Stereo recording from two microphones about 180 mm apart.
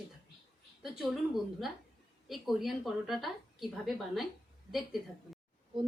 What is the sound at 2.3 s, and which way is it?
A woman's voice, centre (ahead or behind).